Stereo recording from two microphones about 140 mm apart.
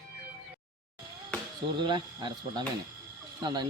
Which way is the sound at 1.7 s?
35° right (ahead or behind).